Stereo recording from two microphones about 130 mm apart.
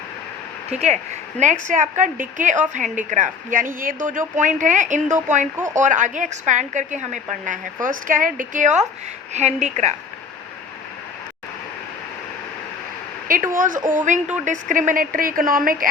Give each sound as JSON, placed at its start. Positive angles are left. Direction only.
{"t": 0.7, "sound": "a woman's voice", "side_deg": -60}
{"t": 1.6, "sound": "a woman's voice", "side_deg": -80}
{"t": 9.3, "sound": "a woman's voice", "side_deg": -60}
{"t": 13.2, "sound": "speech", "side_deg": -90}